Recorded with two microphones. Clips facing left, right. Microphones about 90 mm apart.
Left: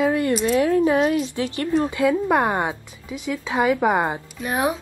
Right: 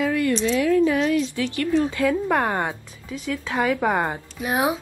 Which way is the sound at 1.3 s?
25° left (ahead or behind).